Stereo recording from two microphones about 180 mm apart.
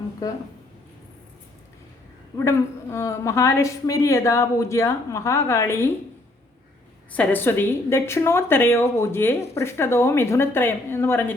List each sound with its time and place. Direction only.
2.4 s a woman's voice: 15° left (ahead or behind)
7.1 s a woman's voice: 10° left (ahead or behind)